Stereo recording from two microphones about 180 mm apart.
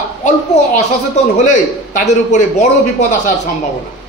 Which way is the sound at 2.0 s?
45° left (ahead or behind).